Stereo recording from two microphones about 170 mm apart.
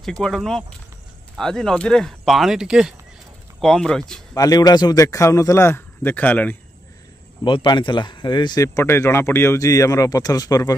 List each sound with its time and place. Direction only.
0.0 s speech: 5° left (ahead or behind)
4.3 s a man's voice: 20° left (ahead or behind)
7.4 s speech: 30° left (ahead or behind)